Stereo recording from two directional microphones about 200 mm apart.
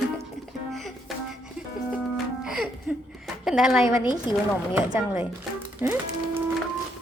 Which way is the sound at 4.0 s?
25° left (ahead or behind).